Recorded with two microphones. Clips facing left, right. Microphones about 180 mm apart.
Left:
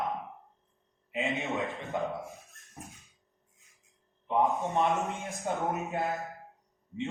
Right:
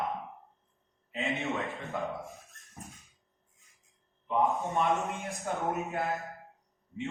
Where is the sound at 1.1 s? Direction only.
15° left (ahead or behind).